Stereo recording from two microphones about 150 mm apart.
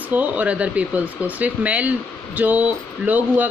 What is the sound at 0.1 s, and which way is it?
Speech, 10° right (ahead or behind).